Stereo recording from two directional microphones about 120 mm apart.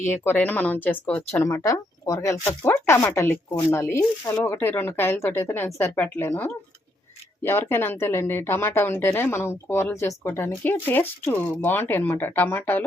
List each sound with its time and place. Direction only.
0.0 s a woman's voice: 20° left (ahead or behind)
1.5 s a woman's voice: 30° left (ahead or behind)